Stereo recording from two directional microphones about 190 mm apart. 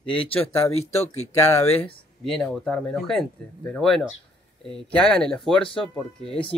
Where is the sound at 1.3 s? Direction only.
15° left (ahead or behind).